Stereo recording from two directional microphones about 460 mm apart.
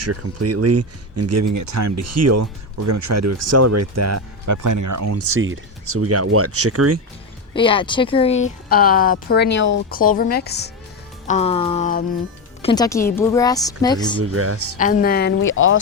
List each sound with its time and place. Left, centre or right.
0.0 s speech: right
7.5 s speech: centre
14.2 s speech: right
14.8 s speech: centre